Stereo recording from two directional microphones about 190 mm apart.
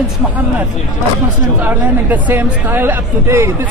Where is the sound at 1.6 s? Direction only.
10° right (ahead or behind).